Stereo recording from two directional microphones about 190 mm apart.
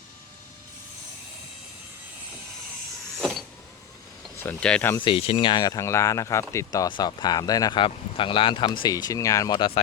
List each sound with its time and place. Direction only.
3.2 s power windows: 5° right (ahead or behind)
4.4 s speech: 10° left (ahead or behind)
5.0 s speech: 30° left (ahead or behind)